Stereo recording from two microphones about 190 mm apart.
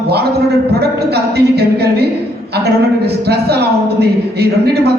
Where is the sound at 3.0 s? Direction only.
60° right (ahead or behind).